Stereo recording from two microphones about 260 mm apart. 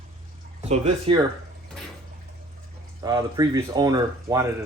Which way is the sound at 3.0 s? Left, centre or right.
Centre.